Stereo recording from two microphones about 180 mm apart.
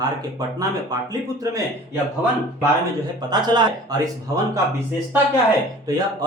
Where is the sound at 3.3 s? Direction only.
25° right (ahead or behind).